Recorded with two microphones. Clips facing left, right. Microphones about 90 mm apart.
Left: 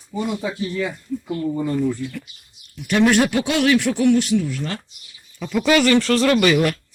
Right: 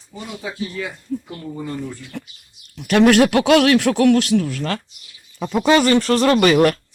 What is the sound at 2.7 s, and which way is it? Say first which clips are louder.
Speech: right 4 dB; 70° right (ahead or behind).